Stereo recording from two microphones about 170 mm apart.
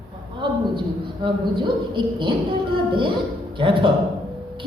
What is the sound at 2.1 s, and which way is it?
A man's voice, 30° right (ahead or behind).